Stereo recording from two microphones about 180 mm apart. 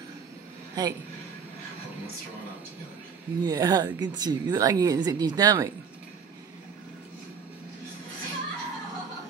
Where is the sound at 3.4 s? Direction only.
20° right (ahead or behind).